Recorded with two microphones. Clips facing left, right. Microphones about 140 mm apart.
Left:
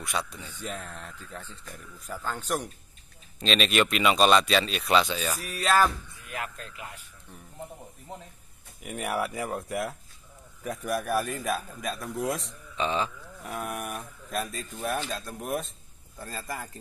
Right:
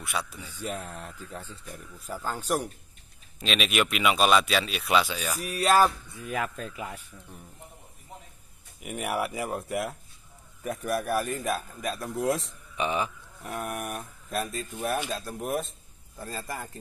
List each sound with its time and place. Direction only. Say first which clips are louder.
0.0 s speech: left 1 dB; 5° right (ahead or behind)
1.7 s speech: right 2 dB; 40° right (ahead or behind)
2.2 s speech: right 2 dB; 10° right (ahead or behind)
8.8 s speech: even; centre (ahead or behind)
12.7 s speech: even; 15° right (ahead or behind)
13.5 s speech: right 1 dB; centre (ahead or behind)